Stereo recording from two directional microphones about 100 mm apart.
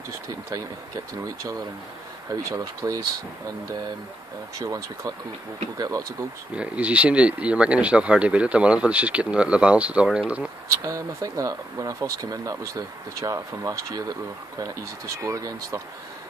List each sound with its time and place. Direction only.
1.2 s speech: 30° right (ahead or behind)
4.6 s speech: 35° right (ahead or behind)
6.5 s speech: 10° right (ahead or behind)
10.8 s speech: 30° right (ahead or behind)